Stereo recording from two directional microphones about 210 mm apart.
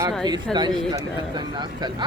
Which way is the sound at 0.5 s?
5° left (ahead or behind).